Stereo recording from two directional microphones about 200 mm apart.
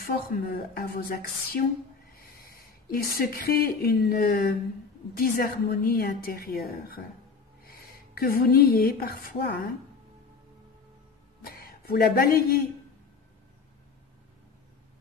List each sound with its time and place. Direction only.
0.7 s a woman's voice: 45° left (ahead or behind)
11.4 s speech: 50° left (ahead or behind)